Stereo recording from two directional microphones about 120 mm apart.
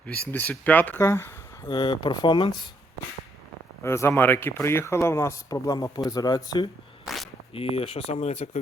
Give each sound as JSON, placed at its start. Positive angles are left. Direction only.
{"t": 0.1, "sound": "speech", "side_deg": 15}
{"t": 1.6, "sound": "speech", "side_deg": 40}
{"t": 3.8, "sound": "speech", "side_deg": 20}
{"t": 7.0, "sound": "a sound", "side_deg": 0}
{"t": 7.5, "sound": "speech", "side_deg": 55}